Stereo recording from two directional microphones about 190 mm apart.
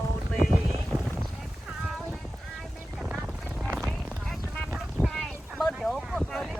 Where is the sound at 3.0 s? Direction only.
Centre (ahead or behind).